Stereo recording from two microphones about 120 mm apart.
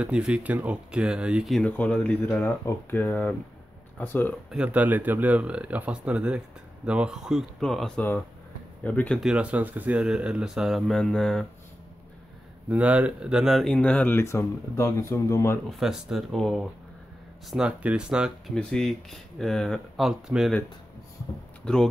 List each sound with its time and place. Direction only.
0.0 s speech: 10° right (ahead or behind)
1.6 s speech: 10° left (ahead or behind)
4.5 s speech: 10° right (ahead or behind); by 9.2 s 10° left (ahead or behind)
9.2 s speech: 10° right (ahead or behind)
12.6 s speech: 10° right (ahead or behind); by 14.2 s 10° left (ahead or behind)
14.2 s speech: 25° left (ahead or behind)
15.8 s speech: 5° right (ahead or behind)
18.5 s speech: 5° left (ahead or behind)
21.6 s speech: 5° left (ahead or behind)